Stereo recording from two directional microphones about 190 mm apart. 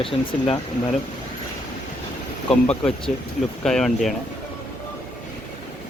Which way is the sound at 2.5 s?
5° left (ahead or behind).